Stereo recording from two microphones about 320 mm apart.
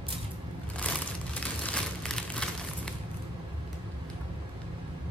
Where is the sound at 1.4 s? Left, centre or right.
Centre.